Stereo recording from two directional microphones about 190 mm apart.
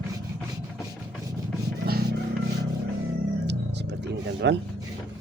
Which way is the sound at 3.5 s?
65° right (ahead or behind).